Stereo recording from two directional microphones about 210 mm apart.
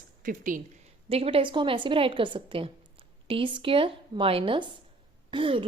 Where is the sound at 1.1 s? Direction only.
25° right (ahead or behind).